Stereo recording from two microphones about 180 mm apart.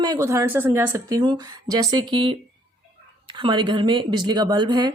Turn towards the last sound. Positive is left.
turn(degrees=-25)  # may be behind; listen again after turning